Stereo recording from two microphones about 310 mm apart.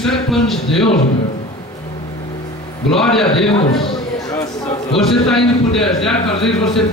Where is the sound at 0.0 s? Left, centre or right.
Centre.